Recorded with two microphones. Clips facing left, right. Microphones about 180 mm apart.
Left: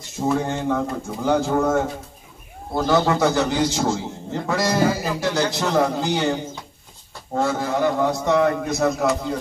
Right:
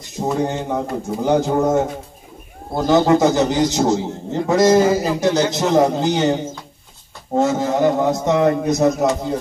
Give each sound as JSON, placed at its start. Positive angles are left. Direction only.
{"t": 0.2, "sound": "a man's voice", "side_deg": -20}